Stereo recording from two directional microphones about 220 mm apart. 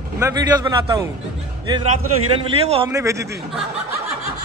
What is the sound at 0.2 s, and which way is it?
Speech, 15° right (ahead or behind).